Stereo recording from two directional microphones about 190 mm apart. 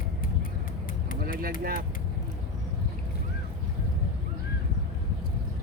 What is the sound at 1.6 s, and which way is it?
Speech, 50° right (ahead or behind).